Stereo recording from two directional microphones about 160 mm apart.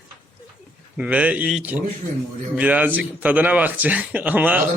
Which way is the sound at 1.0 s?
10° right (ahead or behind).